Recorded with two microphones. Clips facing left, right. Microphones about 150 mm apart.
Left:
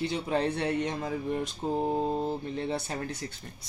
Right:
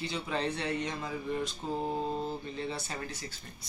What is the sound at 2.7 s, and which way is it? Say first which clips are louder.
Speech: left 6 dB; 60° left (ahead or behind).